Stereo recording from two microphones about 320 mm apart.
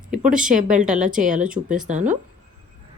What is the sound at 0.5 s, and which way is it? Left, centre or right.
Speech, right.